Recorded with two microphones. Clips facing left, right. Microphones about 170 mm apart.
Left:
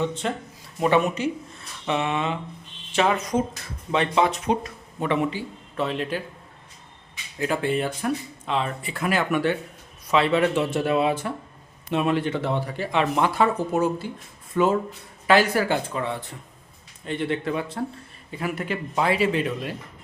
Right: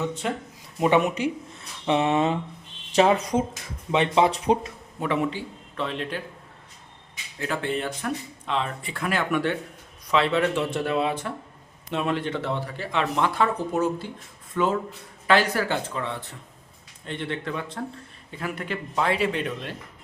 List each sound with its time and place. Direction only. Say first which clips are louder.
0.0 s speech: left 2 dB; 10° right (ahead or behind)
1.9 s speech: right 3 dB; 30° right (ahead or behind)
2.1 s speech: right 4 dB; 40° right (ahead or behind)
3.5 s speech: even; 20° right (ahead or behind)
4.9 s a man's voice: left 1 dB; centre (ahead or behind)
7.3 s speech: left 4 dB; 15° left (ahead or behind)